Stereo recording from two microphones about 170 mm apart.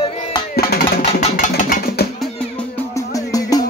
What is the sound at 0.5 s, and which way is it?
Music, 65° left (ahead or behind).